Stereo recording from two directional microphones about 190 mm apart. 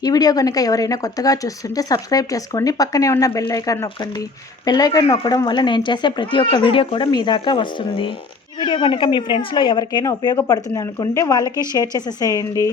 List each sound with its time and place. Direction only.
0.0 s speech: 20° left (ahead or behind)
11.4 s a woman's voice: 15° right (ahead or behind)
11.7 s speech: 20° left (ahead or behind)